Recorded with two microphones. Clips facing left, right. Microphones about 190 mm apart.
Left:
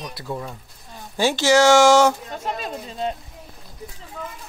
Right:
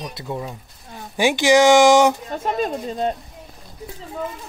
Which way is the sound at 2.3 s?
50° right (ahead or behind).